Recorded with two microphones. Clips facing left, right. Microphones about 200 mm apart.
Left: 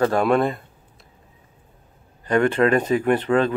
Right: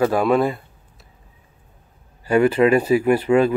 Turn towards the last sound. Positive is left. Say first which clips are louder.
# right 3 dB
turn(degrees=-10)  # may be behind; listen again after turning